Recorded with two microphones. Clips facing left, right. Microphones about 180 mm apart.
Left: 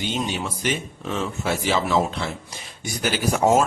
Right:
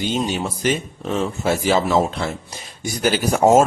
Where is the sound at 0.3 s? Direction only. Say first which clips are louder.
Right 5 dB; 40° right (ahead or behind).